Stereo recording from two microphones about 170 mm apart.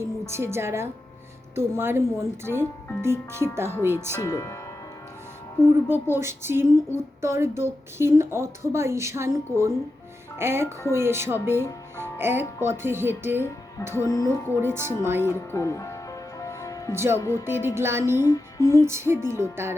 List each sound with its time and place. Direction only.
0.0 s a woman's voice: 15° right (ahead or behind)
4.2 s music: 20° left (ahead or behind)
5.6 s speech: 15° right (ahead or behind)
10.3 s music: 15° right (ahead or behind)
10.9 s speech: 15° right (ahead or behind)
13.9 s music: 20° left (ahead or behind)
14.6 s speech: 15° right (ahead or behind)
15.3 s speech: 20° left (ahead or behind)
16.4 s music: 20° left (ahead or behind)
16.9 s speech: 15° right (ahead or behind)
17.2 s speech: 15° left (ahead or behind)
17.4 s speech: 15° right (ahead or behind)
18.2 s music: 20° left (ahead or behind)
18.9 s speech: 15° right (ahead or behind)